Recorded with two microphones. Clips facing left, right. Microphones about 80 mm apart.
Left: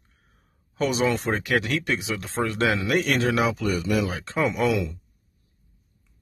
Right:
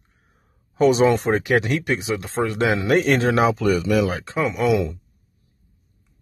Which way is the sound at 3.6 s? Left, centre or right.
Right.